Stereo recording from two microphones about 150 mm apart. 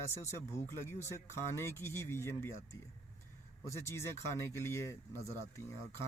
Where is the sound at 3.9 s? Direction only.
20° left (ahead or behind).